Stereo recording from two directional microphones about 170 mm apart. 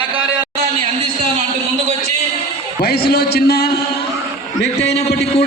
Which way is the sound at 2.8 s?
65° left (ahead or behind).